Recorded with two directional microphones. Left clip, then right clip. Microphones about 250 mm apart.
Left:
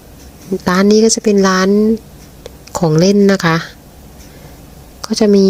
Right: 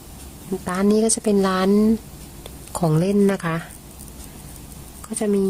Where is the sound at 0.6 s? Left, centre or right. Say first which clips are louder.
Left 10 dB; centre.